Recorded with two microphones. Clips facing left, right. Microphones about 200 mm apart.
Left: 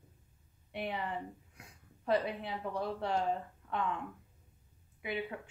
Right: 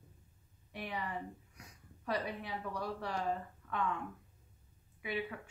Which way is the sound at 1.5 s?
25° left (ahead or behind).